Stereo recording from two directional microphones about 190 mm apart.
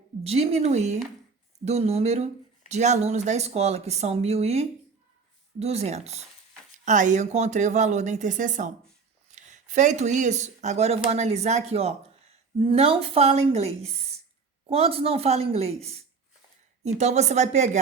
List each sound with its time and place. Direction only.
0.3 s speech: 35° right (ahead or behind)